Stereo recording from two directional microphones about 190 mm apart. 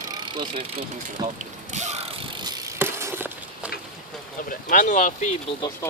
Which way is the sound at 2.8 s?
15° right (ahead or behind).